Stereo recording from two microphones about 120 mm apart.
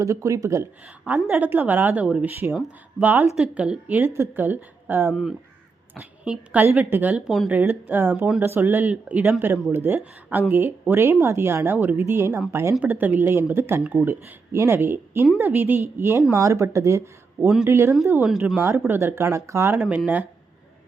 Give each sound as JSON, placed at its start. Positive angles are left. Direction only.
{"t": 0.0, "sound": "a woman's voice", "side_deg": -25}
{"t": 1.0, "sound": "a woman's voice", "side_deg": -15}
{"t": 7.3, "sound": "speech", "side_deg": 0}
{"t": 7.5, "sound": "a woman's voice", "side_deg": -15}
{"t": 18.1, "sound": "a woman's voice", "side_deg": -5}
{"t": 18.6, "sound": "a woman's voice", "side_deg": -15}